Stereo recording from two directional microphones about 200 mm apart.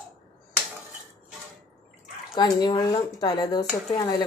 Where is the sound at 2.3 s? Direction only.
20° left (ahead or behind).